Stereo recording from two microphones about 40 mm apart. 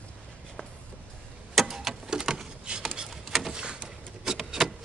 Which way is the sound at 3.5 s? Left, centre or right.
Right.